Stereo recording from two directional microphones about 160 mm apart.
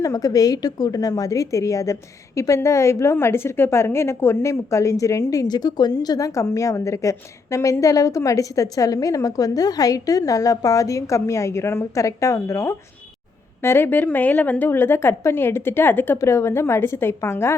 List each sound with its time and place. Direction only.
0.0 s a woman's voice: 20° left (ahead or behind)